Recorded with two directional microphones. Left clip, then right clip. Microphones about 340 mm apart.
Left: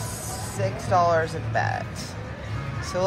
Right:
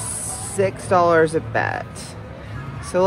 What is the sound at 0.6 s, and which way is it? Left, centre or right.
Speech, right.